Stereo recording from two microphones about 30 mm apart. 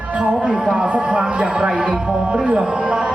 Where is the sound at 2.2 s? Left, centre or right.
Right.